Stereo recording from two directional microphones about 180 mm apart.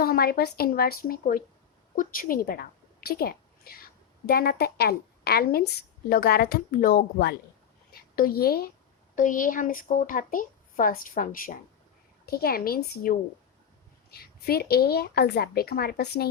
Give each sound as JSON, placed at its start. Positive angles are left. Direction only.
{"t": 0.0, "sound": "a woman's voice", "side_deg": 55}
{"t": 9.1, "sound": "a woman's voice", "side_deg": 45}